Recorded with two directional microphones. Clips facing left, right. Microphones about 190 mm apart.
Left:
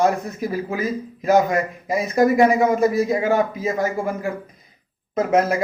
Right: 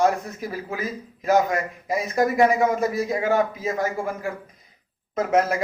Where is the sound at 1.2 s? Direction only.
15° left (ahead or behind).